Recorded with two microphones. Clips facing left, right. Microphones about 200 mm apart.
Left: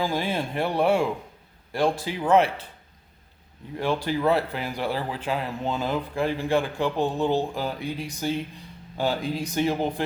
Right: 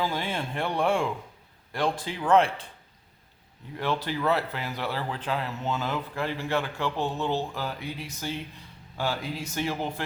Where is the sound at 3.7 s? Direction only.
10° left (ahead or behind).